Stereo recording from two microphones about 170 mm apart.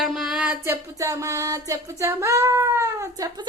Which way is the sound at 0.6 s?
15° right (ahead or behind).